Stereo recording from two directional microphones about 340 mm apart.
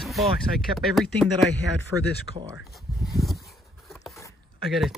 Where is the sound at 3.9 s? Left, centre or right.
Centre.